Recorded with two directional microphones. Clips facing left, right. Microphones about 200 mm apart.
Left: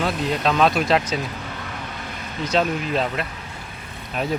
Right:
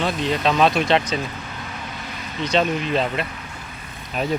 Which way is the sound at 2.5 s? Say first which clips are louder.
Right 1 dB; 5° left (ahead or behind).